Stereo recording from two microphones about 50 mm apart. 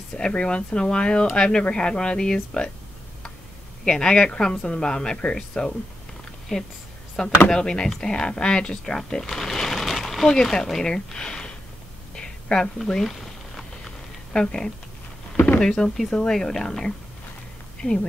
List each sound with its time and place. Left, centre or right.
0.1 s speech: left
3.8 s speech: centre
12.2 s a sound: centre
12.8 s speech: centre
13.1 s a sound: centre
15.6 s speech: centre
17.8 s a woman's voice: left